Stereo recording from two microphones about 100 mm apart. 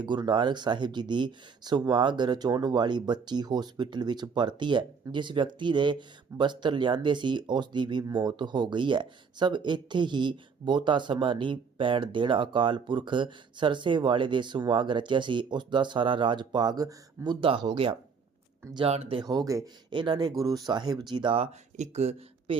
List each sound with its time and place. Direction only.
0.0 s speech: 50° right (ahead or behind)
17.2 s speech: 55° right (ahead or behind)
18.9 s speech: 80° right
19.2 s speech: 40° right (ahead or behind)
19.9 s speech: 50° right (ahead or behind)
21.9 s speech: 90° right